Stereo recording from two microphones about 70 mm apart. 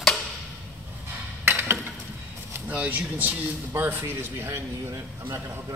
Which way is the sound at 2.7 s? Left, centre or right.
Right.